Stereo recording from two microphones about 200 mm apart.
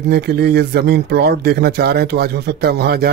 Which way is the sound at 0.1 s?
55° right (ahead or behind).